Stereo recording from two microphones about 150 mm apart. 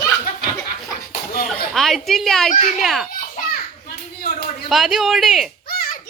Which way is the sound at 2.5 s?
50° left (ahead or behind).